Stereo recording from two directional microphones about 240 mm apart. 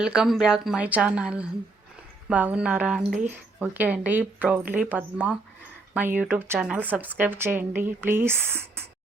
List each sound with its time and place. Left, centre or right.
0.0 s a woman's voice: centre